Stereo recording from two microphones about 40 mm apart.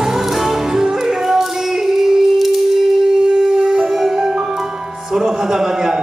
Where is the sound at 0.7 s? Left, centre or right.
Centre.